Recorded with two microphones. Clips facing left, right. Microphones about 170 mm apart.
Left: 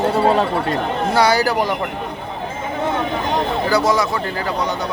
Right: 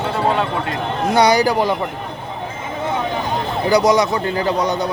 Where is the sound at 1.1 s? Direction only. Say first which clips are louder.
Right 2 dB; 15° right (ahead or behind).